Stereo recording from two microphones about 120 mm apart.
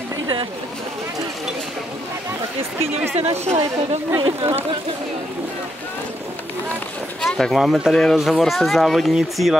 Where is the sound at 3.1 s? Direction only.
60° right (ahead or behind).